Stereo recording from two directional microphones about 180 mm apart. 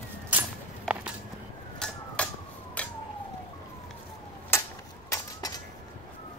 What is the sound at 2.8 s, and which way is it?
Emergency vehicle, 5° left (ahead or behind).